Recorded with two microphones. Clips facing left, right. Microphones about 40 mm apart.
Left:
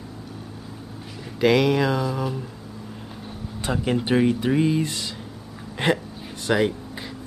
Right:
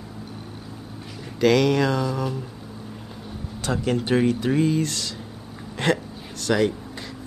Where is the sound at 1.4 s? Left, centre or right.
Centre.